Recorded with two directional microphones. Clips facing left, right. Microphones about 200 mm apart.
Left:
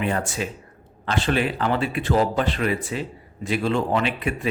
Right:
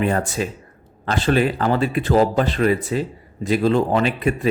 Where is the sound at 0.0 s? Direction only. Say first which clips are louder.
Right 4 dB; 40° right (ahead or behind).